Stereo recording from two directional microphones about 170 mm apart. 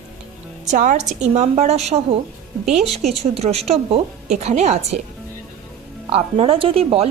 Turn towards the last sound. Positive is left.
turn(degrees=-35)  # may be behind; listen again after turning